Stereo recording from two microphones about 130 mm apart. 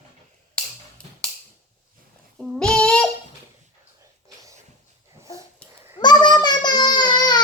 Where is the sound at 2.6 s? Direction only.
5° left (ahead or behind).